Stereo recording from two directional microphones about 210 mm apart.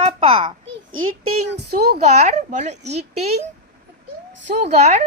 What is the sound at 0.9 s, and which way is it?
Speech, 85° right.